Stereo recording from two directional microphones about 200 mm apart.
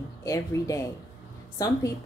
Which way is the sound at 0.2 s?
15° left (ahead or behind).